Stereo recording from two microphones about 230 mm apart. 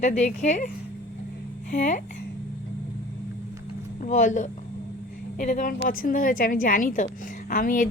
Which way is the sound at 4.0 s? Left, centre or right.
Left.